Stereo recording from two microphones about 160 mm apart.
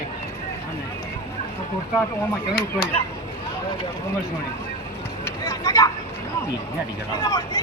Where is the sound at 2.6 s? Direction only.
75° left (ahead or behind).